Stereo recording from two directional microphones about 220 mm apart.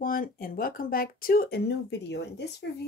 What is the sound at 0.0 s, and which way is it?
Speech, 40° left (ahead or behind).